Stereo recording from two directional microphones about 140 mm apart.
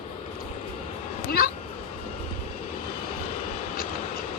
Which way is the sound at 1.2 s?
90° left.